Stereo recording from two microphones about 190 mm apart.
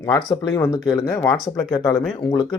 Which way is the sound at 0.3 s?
20° left (ahead or behind).